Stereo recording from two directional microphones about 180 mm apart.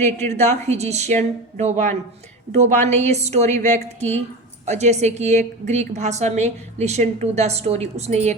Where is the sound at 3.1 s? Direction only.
40° right (ahead or behind).